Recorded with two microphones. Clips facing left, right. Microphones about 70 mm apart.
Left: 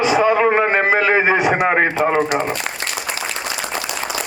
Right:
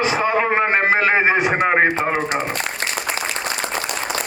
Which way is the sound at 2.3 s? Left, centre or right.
Right.